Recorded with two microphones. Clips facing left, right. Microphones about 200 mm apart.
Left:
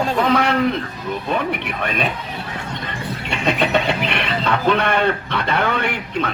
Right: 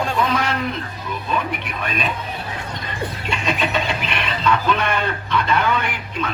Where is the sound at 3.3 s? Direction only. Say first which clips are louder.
Left 5 dB; 60° left (ahead or behind).